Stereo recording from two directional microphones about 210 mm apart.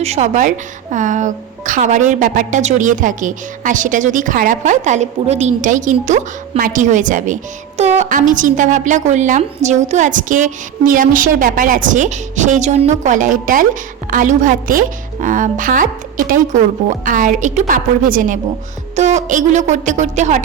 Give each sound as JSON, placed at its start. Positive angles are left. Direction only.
{"t": 0.0, "sound": "a woman's voice", "side_deg": -30}